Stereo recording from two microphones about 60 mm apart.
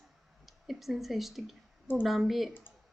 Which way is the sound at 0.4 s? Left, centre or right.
Centre.